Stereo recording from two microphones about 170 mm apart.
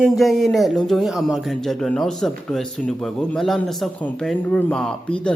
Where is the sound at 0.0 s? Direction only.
Centre (ahead or behind).